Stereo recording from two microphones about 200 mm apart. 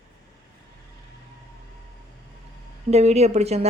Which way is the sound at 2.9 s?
30° right (ahead or behind).